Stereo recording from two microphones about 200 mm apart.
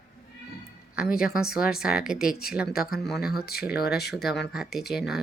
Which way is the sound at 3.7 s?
50° left (ahead or behind).